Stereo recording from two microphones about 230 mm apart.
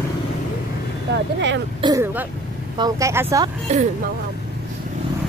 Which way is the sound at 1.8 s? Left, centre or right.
Centre.